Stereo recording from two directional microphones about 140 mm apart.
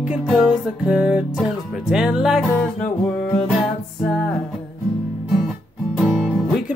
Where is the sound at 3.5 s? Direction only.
Centre (ahead or behind).